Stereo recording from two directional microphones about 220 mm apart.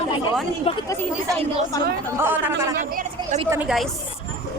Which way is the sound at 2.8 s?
40° right (ahead or behind).